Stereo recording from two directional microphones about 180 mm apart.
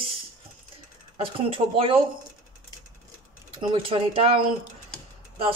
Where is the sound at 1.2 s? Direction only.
30° right (ahead or behind).